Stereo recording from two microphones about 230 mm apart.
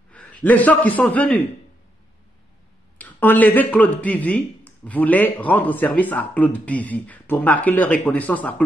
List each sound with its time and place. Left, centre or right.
0.1 s a man's voice: centre
3.0 s speech: centre